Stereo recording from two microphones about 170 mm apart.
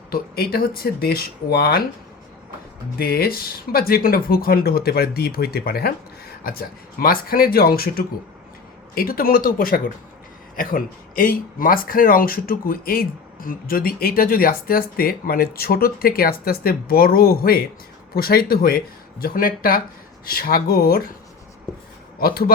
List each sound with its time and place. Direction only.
0.1 s speech: 60° left (ahead or behind)
3.0 s speech: 65° left (ahead or behind)
22.2 s speech: 65° left (ahead or behind)